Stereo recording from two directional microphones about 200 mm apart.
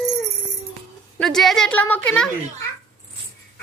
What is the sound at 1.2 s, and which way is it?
A woman's voice, centre (ahead or behind).